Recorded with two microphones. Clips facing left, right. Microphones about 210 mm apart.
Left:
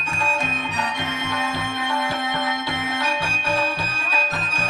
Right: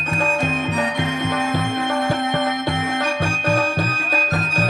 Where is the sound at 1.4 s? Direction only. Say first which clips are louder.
Right 5 dB; 50° right (ahead or behind).